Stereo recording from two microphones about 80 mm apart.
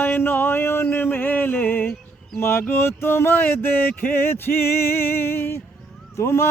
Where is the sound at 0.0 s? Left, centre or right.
Left.